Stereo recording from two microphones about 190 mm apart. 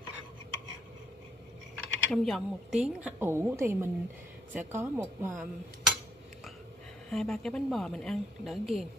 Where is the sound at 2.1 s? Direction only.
Centre (ahead or behind).